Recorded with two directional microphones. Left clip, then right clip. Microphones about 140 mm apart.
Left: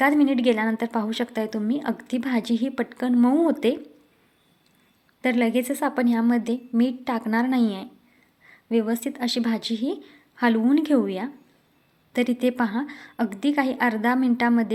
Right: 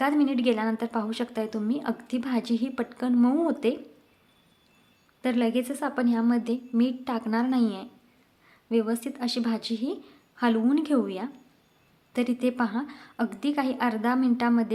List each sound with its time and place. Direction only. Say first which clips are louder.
0.0 s a woman's voice: left 5 dB; 20° left (ahead or behind)
5.2 s a woman's voice: left 4 dB; 20° left (ahead or behind)